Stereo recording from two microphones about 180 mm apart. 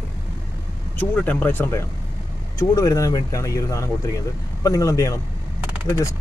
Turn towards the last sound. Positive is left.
turn(degrees=15)  # may be behind; listen again after turning